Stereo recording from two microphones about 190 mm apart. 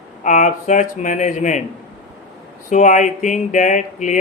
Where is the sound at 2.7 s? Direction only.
40° left (ahead or behind).